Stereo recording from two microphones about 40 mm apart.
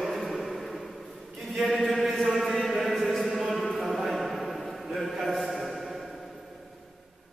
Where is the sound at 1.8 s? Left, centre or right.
Centre.